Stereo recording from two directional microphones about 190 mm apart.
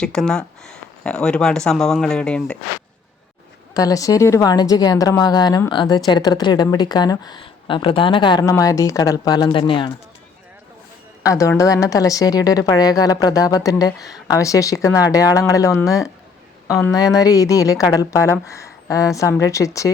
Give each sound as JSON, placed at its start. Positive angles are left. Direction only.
{"t": 0.0, "sound": "speech", "side_deg": 5}
{"t": 3.8, "sound": "speech", "side_deg": 20}
{"t": 11.2, "sound": "a woman's voice", "side_deg": 15}